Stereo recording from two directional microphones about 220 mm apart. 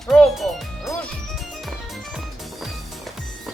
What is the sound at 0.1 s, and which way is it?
Music, centre (ahead or behind).